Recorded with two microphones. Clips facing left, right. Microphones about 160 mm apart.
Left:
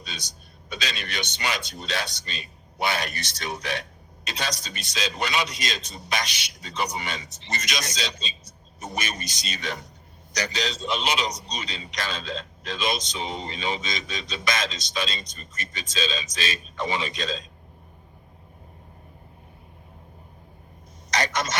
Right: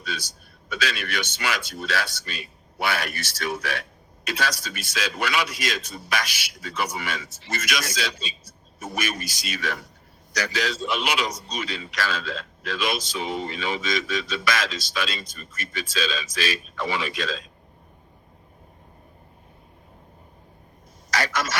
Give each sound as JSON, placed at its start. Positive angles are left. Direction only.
{"t": 0.0, "sound": "a man's voice", "side_deg": 20}
{"t": 21.1, "sound": "a man's voice", "side_deg": 20}